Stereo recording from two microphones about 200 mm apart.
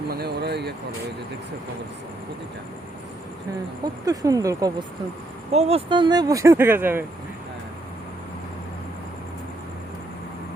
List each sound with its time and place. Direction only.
0.1 s speech: 50° right (ahead or behind)
4.0 s speech: 15° right (ahead or behind)
5.5 s speech: 30° right (ahead or behind); by 7.0 s 10° right (ahead or behind)